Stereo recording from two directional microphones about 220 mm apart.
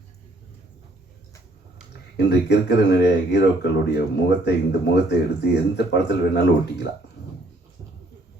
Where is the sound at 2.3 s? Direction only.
50° left (ahead or behind).